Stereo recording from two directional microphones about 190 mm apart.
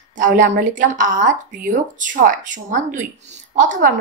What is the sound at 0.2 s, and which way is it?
A woman's voice, 45° right (ahead or behind).